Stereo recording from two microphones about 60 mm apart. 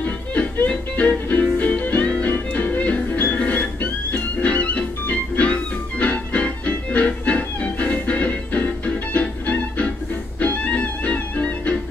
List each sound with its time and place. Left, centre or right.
0.0 s music: left